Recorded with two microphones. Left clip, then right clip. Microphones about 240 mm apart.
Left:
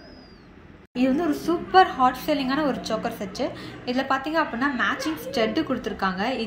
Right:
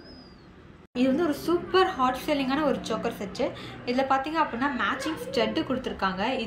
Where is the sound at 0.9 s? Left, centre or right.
Centre.